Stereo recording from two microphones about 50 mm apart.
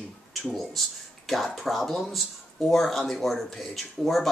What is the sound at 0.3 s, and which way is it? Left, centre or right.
Speech, centre.